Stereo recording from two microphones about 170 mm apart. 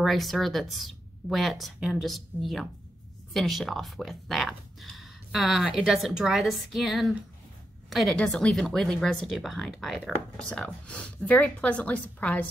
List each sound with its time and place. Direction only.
0.0 s speech: centre (ahead or behind)